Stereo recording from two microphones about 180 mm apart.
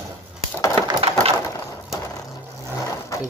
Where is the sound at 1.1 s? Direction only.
35° right (ahead or behind).